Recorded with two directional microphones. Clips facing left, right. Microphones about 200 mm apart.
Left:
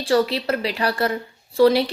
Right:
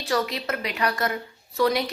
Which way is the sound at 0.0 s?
30° left (ahead or behind).